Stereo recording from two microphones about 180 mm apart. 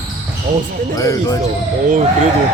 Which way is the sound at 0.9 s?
20° left (ahead or behind).